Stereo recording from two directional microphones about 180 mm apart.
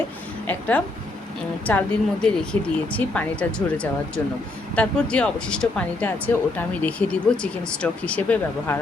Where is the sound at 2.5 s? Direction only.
30° right (ahead or behind).